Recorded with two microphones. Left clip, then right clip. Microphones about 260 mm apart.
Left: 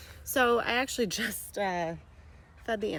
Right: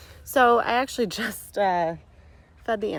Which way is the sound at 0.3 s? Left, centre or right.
Centre.